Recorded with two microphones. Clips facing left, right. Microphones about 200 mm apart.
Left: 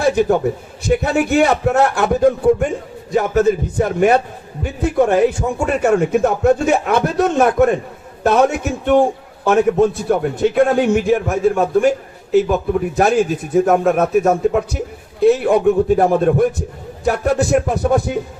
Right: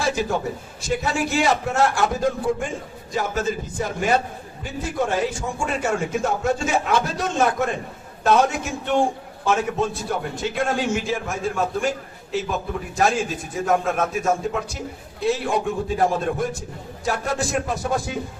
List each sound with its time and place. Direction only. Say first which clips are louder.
0.0 s a man's voice: left 9 dB; 60° left (ahead or behind)
10.1 s a man's voice: left 10 dB; 60° left (ahead or behind)